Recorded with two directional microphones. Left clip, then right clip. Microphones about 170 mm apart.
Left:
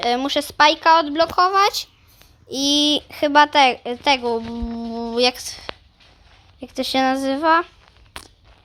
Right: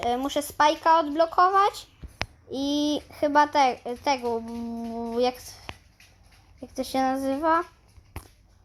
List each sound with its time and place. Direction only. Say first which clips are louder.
0.1 s a child's voice: left 6 dB; 15° left (ahead or behind)